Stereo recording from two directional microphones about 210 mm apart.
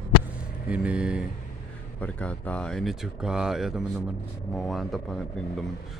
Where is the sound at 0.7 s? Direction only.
5° right (ahead or behind).